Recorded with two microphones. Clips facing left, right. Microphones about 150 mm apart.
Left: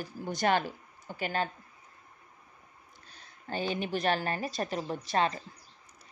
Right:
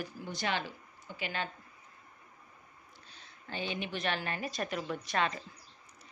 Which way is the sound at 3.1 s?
45° left (ahead or behind).